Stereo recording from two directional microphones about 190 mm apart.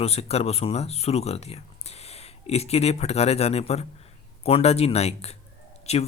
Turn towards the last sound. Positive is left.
turn(degrees=35)  # may be behind; listen again after turning